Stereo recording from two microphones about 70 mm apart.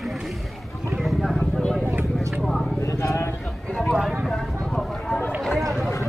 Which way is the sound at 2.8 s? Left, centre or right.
Left.